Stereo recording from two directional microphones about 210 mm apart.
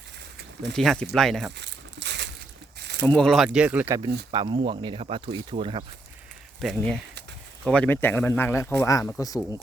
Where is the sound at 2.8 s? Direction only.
55° right (ahead or behind).